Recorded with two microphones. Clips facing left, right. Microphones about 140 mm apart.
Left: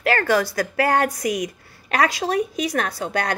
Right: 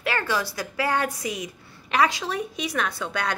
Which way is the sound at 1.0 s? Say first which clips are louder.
Left 6 dB; 75° left (ahead or behind).